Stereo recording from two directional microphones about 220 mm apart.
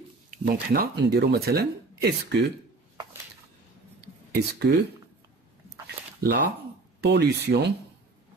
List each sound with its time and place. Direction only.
0.5 s speech: 45° right (ahead or behind)
4.5 s speech: 50° right (ahead or behind)
6.2 s speech: 45° right (ahead or behind)